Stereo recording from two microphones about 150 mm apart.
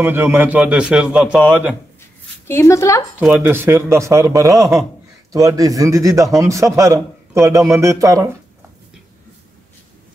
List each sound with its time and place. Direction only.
0.0 s a man's voice: 15° right (ahead or behind)
2.4 s a woman's voice: 20° left (ahead or behind)
3.2 s a man's voice: 5° right (ahead or behind)
4.6 s speech: centre (ahead or behind)
5.3 s a man's voice: 20° right (ahead or behind)